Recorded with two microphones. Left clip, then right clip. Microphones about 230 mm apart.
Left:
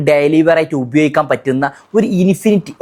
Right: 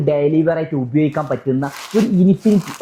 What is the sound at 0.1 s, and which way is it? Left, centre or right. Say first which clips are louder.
Speech: left 6 dB; left.